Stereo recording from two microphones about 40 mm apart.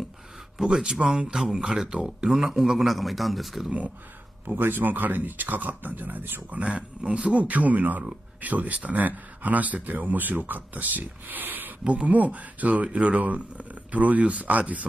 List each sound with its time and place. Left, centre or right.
0.6 s speech: centre
4.6 s speech: right
7.0 s speech: right
7.3 s speech: right
11.8 s speech: right
12.1 s speech: right